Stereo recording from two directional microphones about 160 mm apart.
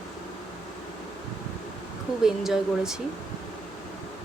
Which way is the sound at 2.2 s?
5° right (ahead or behind).